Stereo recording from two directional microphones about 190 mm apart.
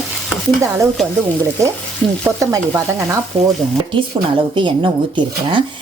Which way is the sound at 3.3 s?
25° right (ahead or behind).